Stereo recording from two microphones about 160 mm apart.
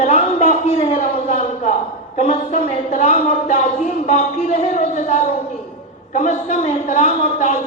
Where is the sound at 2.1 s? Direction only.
45° left (ahead or behind).